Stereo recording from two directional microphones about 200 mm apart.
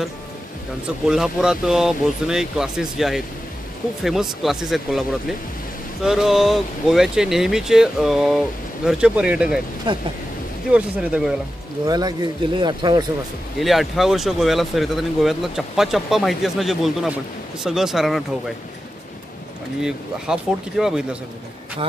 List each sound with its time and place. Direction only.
1.0 s speech: 5° right (ahead or behind)
6.0 s speech: centre (ahead or behind)
9.9 s speech: 25° right (ahead or behind)
10.7 s speech: 5° right (ahead or behind)
11.8 s speech: 20° right (ahead or behind)
13.6 s speech: centre (ahead or behind)
19.8 s speech: 5° right (ahead or behind)